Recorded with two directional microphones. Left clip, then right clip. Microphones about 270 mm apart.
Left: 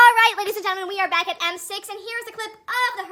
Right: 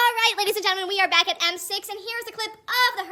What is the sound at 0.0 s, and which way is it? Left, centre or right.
A woman's voice, centre.